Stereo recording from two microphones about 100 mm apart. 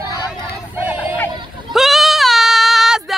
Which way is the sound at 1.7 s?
Centre (ahead or behind).